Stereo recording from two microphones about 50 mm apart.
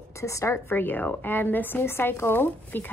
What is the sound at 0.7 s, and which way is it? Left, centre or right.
Speech, left.